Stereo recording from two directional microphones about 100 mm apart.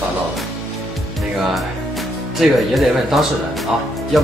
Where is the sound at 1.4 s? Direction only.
Centre (ahead or behind).